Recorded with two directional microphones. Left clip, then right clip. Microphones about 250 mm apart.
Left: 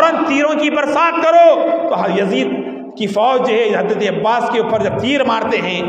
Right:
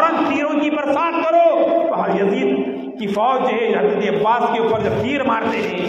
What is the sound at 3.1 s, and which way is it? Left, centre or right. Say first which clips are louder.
A man's voice: left 4 dB; left.